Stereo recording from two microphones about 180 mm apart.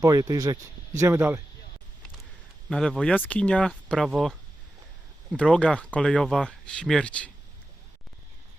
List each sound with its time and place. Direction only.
0.0 s speech: 20° right (ahead or behind)
2.6 s speech: 5° left (ahead or behind)
5.4 s speech: 5° left (ahead or behind)